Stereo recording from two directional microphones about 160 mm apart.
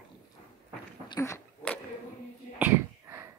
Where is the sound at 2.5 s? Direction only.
15° right (ahead or behind).